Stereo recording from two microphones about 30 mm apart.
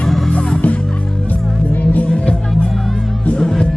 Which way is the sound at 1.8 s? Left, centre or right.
Left.